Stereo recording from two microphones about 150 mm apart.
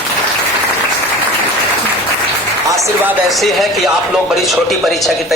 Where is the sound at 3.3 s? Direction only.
Centre (ahead or behind).